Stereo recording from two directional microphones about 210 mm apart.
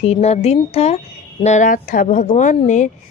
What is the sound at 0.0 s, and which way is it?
Speech, 30° left (ahead or behind).